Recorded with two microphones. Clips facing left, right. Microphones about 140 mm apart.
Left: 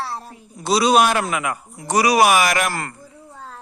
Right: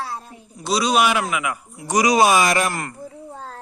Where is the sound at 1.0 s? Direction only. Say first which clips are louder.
Left 1 dB; 45° left (ahead or behind).